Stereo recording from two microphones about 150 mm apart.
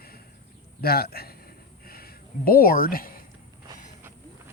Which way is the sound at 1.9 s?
85° left.